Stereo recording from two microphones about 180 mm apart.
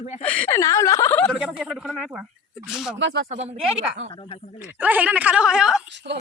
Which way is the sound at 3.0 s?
75° right (ahead or behind).